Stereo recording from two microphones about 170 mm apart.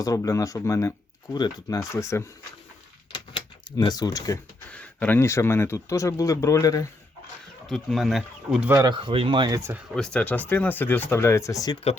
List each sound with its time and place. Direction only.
0.0 s speech: 20° left (ahead or behind)
3.1 s typewriter: 25° left (ahead or behind)
4.7 s speech: 10° left (ahead or behind)
7.7 s speech: centre (ahead or behind)
8.7 s speech: 25° right (ahead or behind)
9.6 s speech: 15° right (ahead or behind)
9.9 s speech: 5° left (ahead or behind); by 11.8 s 20° left (ahead or behind)